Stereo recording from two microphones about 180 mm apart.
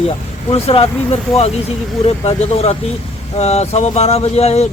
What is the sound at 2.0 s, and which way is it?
Speech, 35° left (ahead or behind).